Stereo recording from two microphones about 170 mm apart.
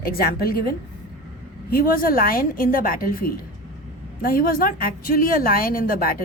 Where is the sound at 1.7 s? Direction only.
60° left (ahead or behind).